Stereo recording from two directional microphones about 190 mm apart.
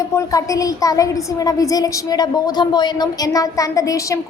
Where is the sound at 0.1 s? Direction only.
15° left (ahead or behind).